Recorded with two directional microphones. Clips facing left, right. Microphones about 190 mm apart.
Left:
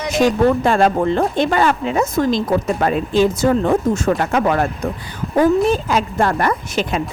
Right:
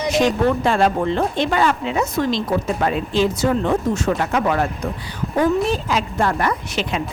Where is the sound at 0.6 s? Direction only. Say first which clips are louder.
Left 3 dB; 50° left (ahead or behind).